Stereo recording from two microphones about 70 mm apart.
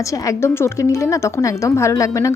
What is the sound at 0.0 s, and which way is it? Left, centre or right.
A woman's voice, left.